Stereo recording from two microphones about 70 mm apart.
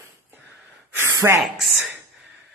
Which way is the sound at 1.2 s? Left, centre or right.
Right.